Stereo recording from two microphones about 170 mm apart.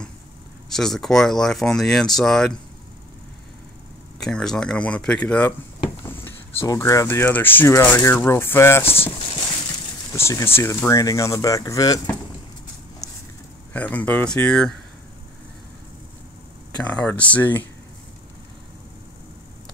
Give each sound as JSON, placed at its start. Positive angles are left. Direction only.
{"t": 0.7, "sound": "speech", "side_deg": 0}
{"t": 4.2, "sound": "speech", "side_deg": 5}
{"t": 10.1, "sound": "speech", "side_deg": 15}
{"t": 13.7, "sound": "speech", "side_deg": 10}
{"t": 16.7, "sound": "speech", "side_deg": 5}